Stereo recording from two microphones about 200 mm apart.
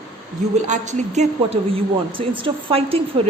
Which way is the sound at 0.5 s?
35° right (ahead or behind).